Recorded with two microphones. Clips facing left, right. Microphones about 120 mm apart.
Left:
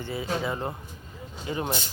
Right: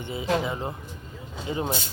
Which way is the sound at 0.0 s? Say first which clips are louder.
Even; 20° right (ahead or behind).